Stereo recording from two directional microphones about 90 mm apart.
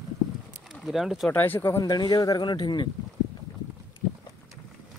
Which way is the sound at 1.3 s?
20° left (ahead or behind).